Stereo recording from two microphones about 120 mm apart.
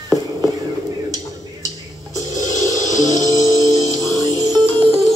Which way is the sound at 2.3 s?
30° right (ahead or behind).